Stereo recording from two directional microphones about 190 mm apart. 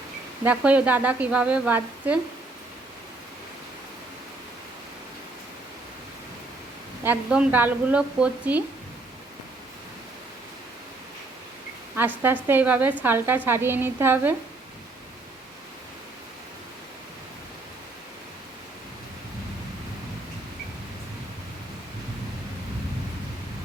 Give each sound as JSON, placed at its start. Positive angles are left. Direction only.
{"t": 0.4, "sound": "a woman's voice", "side_deg": -5}
{"t": 7.0, "sound": "a woman's voice", "side_deg": -5}
{"t": 11.9, "sound": "a woman's voice", "side_deg": -10}